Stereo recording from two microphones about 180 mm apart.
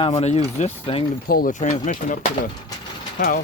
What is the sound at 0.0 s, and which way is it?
Speech, 35° left (ahead or behind).